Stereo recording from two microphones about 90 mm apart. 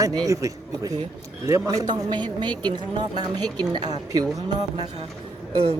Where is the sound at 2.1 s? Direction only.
55° right (ahead or behind).